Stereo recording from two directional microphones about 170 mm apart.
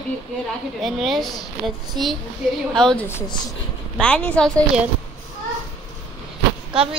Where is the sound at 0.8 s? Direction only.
Centre (ahead or behind).